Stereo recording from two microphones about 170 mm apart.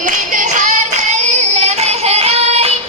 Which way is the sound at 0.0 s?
45° right (ahead or behind).